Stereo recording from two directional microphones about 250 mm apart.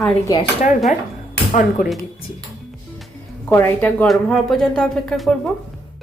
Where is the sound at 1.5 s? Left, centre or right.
Left.